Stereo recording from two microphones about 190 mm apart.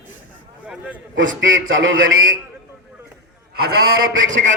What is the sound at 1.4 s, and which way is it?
Speech, 90° right.